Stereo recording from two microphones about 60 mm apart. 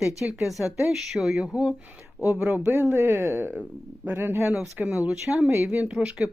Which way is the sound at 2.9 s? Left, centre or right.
Right.